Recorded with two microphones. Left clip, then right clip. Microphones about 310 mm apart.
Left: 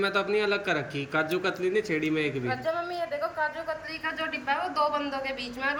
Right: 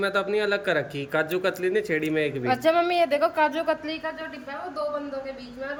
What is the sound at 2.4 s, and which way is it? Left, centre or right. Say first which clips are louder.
Speech: right 8 dB; right.